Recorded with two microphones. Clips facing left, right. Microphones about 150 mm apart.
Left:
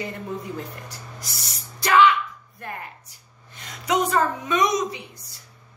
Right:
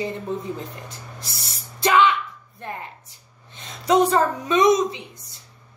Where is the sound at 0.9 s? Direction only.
25° right (ahead or behind).